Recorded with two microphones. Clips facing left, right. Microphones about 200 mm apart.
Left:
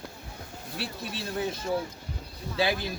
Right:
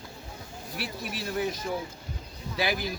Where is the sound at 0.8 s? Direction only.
25° left (ahead or behind).